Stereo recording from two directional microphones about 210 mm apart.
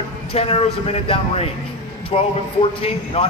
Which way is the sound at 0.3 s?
30° left (ahead or behind).